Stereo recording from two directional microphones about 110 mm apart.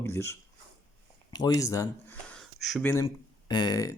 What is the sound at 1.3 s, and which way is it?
Speech, 35° left (ahead or behind).